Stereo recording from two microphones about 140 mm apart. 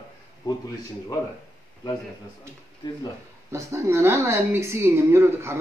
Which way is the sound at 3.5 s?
20° right (ahead or behind).